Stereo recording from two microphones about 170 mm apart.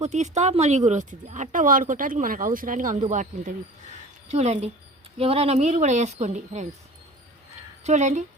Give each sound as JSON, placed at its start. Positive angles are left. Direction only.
{"t": 0.0, "sound": "a woman's voice", "side_deg": -40}
{"t": 7.9, "sound": "speech", "side_deg": -45}